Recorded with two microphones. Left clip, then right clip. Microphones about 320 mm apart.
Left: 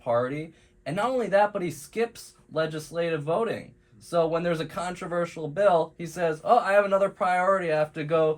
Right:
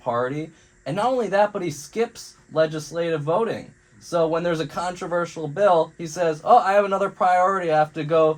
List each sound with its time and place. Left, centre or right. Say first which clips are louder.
0.0 s speech: right 2 dB; centre